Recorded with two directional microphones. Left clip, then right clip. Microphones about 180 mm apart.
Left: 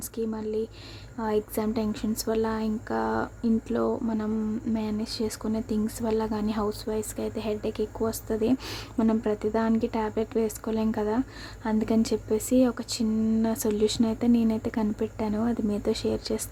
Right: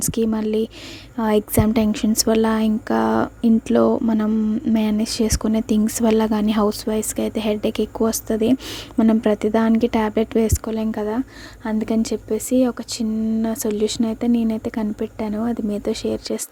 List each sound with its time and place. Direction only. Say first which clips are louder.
0.0 s speech: right 10 dB; 45° right (ahead or behind)